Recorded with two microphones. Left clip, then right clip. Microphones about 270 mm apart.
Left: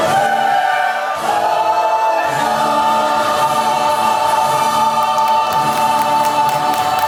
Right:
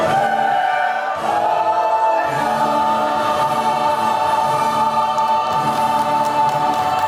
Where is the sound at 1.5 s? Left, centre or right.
Right.